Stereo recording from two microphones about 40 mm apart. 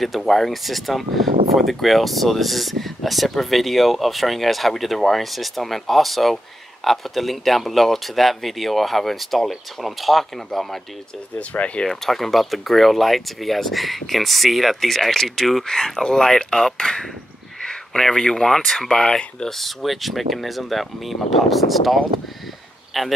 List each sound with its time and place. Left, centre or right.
0.3 s speech: centre
11.3 s speech: left
11.8 s speech: centre
15.6 s speech: centre
18.6 s speech: centre
18.9 s speech: centre
19.6 s speech: centre